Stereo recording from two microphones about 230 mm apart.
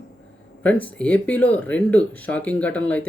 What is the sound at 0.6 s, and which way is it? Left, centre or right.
Speech, centre.